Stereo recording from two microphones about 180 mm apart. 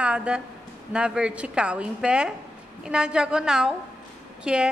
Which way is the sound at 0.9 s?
5° right (ahead or behind).